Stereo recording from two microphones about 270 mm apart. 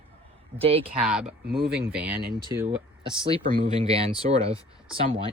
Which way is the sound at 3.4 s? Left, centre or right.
Right.